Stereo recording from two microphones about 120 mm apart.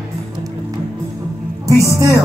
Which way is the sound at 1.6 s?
25° right (ahead or behind).